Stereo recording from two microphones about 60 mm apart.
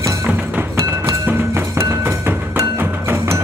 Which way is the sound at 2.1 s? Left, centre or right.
Right.